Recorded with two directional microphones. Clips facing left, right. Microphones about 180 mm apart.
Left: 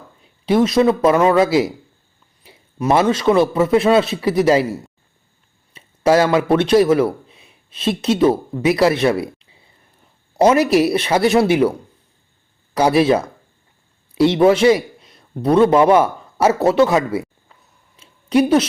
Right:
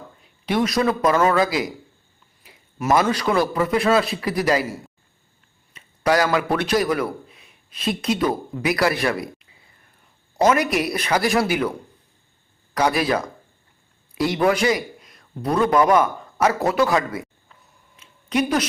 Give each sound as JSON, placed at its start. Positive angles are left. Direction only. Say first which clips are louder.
{"t": 0.4, "sound": "a man's voice", "louder": "left 6 dB", "side_deg": 25}
{"t": 5.7, "sound": "a man's voice", "louder": "left 5 dB", "side_deg": 25}
{"t": 12.7, "sound": "speech", "louder": "left 6 dB", "side_deg": 30}
{"t": 14.4, "sound": "speech", "louder": "left 6 dB", "side_deg": 25}
{"t": 17.9, "sound": "a sound", "louder": "left 7 dB", "side_deg": 30}